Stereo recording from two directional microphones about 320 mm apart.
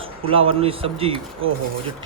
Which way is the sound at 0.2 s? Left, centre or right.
Centre.